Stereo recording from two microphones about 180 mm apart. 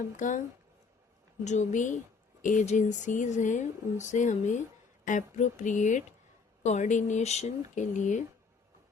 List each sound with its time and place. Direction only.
0.2 s speech: 45° left (ahead or behind)
1.5 s speech: 40° left (ahead or behind)